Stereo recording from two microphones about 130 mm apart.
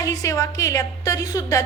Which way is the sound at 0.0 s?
25° left (ahead or behind).